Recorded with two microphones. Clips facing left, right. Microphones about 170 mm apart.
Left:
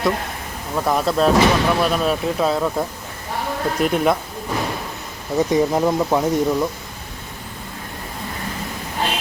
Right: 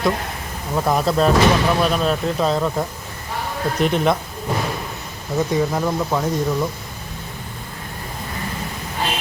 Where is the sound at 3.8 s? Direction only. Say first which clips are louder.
Even; 5° left (ahead or behind).